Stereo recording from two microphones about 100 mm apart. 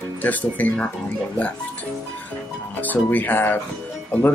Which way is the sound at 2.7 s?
20° left (ahead or behind).